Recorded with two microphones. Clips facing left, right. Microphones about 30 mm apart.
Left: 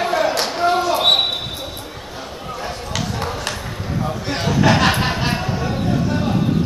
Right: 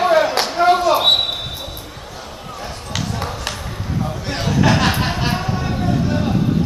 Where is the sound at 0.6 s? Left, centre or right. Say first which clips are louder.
Right 5 dB; right.